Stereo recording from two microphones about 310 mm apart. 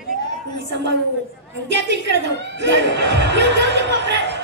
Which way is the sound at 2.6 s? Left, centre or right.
Right.